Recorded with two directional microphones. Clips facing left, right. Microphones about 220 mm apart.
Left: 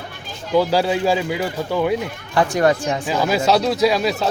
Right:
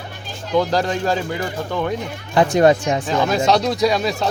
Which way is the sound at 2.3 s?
20° right (ahead or behind).